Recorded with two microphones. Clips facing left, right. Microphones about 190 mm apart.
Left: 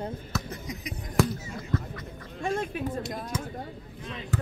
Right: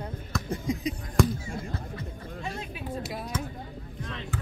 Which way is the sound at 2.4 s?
50° left (ahead or behind).